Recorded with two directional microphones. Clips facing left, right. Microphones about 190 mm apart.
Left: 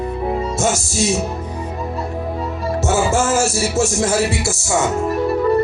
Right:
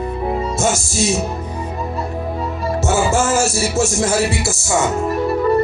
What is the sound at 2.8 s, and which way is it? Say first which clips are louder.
Music: even; 60° left (ahead or behind).